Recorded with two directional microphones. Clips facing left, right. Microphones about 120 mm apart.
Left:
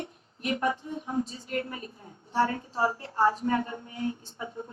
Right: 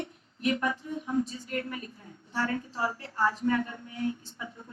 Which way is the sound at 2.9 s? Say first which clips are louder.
Left 4 dB; 25° left (ahead or behind).